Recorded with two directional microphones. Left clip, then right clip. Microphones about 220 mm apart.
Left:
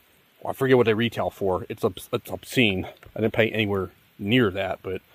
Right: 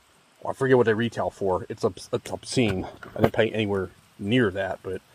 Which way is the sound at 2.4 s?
10° left (ahead or behind).